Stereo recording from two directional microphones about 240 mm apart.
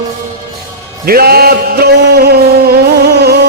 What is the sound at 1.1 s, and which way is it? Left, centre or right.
Music, right.